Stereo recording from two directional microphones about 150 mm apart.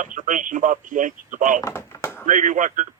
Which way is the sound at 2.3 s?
60° right (ahead or behind).